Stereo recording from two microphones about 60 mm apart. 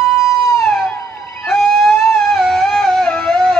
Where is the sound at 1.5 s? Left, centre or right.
Centre.